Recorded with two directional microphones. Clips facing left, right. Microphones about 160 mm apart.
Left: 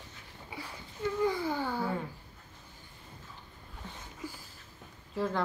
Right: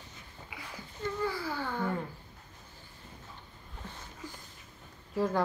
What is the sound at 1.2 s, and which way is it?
Speech, 20° left (ahead or behind).